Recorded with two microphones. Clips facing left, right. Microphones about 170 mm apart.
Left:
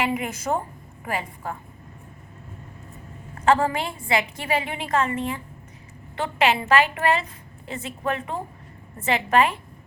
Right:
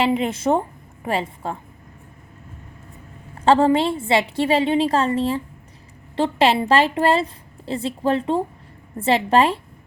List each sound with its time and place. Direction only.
0.0 s a woman's voice: 25° right (ahead or behind)
3.4 s a woman's voice: 25° right (ahead or behind)